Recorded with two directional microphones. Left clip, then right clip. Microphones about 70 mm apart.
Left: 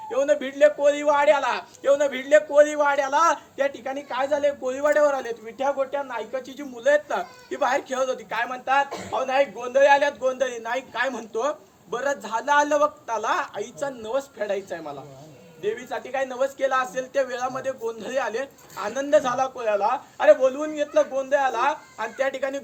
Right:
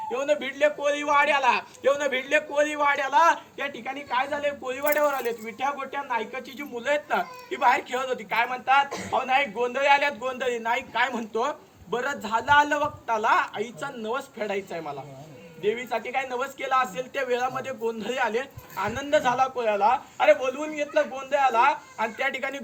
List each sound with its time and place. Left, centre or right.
0.1 s a man's voice: left
8.9 s speech: left
9.1 s a man's voice: left